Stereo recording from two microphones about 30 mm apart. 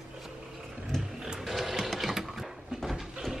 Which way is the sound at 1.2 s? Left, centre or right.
Centre.